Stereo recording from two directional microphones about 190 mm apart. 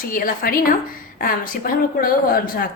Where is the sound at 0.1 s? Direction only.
50° left (ahead or behind).